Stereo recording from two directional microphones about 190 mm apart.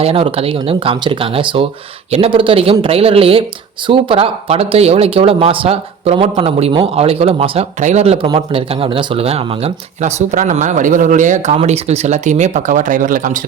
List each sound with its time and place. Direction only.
0.0 s speech: 30° right (ahead or behind)